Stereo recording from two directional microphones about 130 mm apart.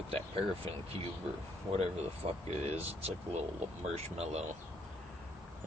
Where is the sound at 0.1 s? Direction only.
45° right (ahead or behind).